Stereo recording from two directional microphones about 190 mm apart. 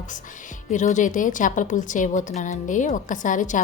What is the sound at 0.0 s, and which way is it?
A woman's voice, 40° left (ahead or behind).